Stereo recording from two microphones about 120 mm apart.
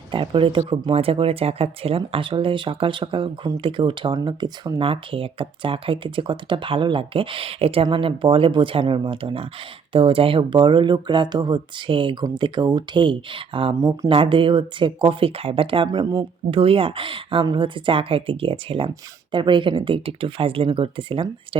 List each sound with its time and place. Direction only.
0.1 s speech: 45° right (ahead or behind)
4.8 s speech: 50° right (ahead or behind)
15.9 s speech: 30° right (ahead or behind)
16.5 s speech: 50° right (ahead or behind)